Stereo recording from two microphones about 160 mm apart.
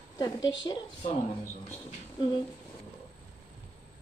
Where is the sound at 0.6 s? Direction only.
30° left (ahead or behind).